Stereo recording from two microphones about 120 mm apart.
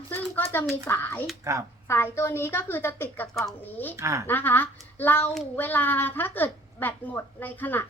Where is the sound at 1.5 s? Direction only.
25° right (ahead or behind).